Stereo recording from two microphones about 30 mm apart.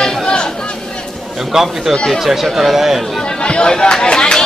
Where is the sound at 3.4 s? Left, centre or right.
Left.